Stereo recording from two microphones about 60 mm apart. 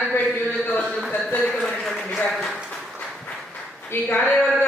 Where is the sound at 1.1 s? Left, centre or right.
Left.